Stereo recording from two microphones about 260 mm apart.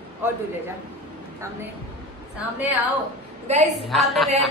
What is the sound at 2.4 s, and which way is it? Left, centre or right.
Speech, centre.